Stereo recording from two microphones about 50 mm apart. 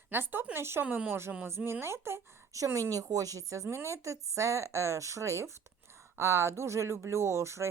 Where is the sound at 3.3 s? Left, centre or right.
Right.